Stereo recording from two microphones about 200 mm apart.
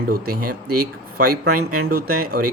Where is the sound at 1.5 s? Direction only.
90° right.